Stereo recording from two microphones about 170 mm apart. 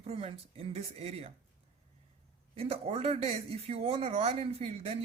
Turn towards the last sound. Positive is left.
turn(degrees=-35)  # may be behind; listen again after turning